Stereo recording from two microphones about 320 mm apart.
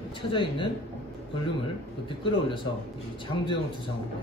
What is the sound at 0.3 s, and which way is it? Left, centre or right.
Speech, centre.